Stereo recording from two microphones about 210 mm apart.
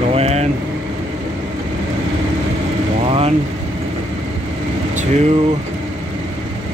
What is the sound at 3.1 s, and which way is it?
Speech, 25° right (ahead or behind).